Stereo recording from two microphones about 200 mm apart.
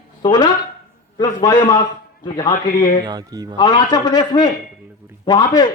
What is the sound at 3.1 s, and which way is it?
Speech, 20° right (ahead or behind).